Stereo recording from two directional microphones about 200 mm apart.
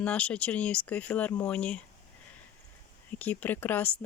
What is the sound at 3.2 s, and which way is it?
Speech, 10° left (ahead or behind).